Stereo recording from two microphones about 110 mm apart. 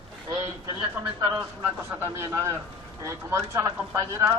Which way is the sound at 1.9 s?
20° right (ahead or behind).